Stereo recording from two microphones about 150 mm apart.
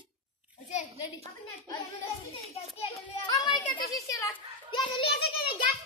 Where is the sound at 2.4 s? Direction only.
45° left (ahead or behind).